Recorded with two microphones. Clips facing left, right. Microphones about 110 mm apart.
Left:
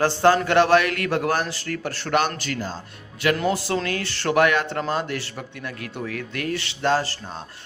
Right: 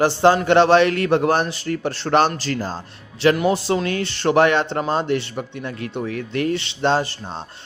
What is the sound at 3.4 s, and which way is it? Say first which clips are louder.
A man's voice: right 4 dB; 25° right (ahead or behind).